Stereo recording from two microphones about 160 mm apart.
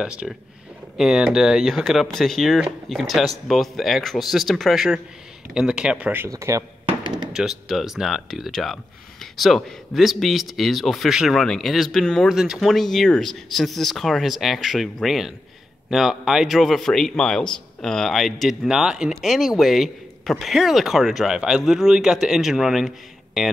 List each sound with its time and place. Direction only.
0.0 s a man's voice: 5° right (ahead or behind)
7.0 s a sound: 30° right (ahead or behind)
7.3 s a man's voice: centre (ahead or behind)